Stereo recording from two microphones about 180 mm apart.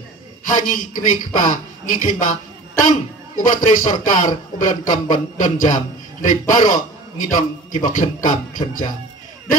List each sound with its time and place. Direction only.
0.5 s speech: 45° left (ahead or behind)
3.3 s a man's voice: 45° left (ahead or behind)